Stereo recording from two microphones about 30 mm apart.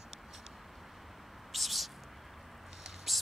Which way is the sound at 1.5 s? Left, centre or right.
Centre.